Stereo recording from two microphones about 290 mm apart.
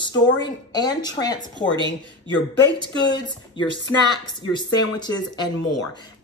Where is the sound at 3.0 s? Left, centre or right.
Centre.